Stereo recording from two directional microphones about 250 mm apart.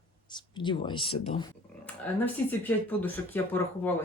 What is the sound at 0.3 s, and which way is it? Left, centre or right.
Speech, centre.